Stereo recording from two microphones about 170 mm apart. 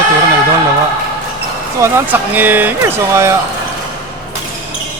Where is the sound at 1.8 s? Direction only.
10° right (ahead or behind).